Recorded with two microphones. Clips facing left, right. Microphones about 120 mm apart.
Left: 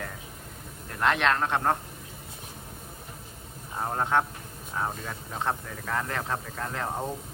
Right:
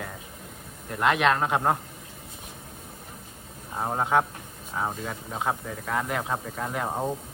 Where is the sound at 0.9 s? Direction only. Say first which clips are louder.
Right 2 dB; 5° right (ahead or behind).